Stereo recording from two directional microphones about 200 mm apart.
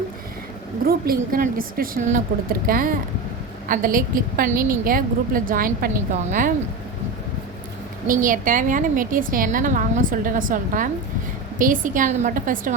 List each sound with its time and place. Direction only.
0.9 s a woman's voice: 50° right (ahead or behind)
8.0 s a woman's voice: 40° right (ahead or behind)